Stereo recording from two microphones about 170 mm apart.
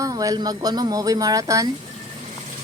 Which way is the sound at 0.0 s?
20° right (ahead or behind).